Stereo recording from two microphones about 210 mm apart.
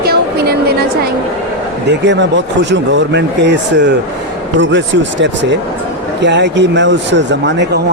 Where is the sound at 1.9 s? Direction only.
55° right (ahead or behind).